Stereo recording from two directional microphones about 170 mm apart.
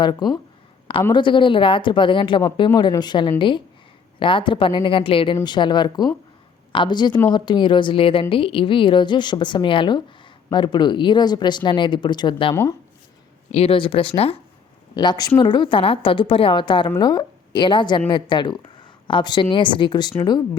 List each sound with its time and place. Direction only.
0.0 s a woman's voice: 25° left (ahead or behind)